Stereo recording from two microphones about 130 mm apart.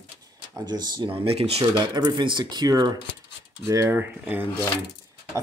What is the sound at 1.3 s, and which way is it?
Speech, 50° right (ahead or behind).